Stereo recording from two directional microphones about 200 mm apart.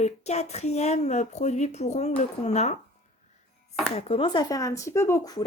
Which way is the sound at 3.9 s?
30° left (ahead or behind).